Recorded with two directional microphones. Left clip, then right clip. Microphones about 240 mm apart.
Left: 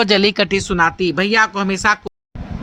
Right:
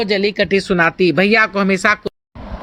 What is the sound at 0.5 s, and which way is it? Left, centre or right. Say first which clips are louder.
Speech: right 1 dB; centre.